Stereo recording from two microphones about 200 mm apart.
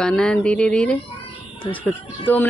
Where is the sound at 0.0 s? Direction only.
5° left (ahead or behind).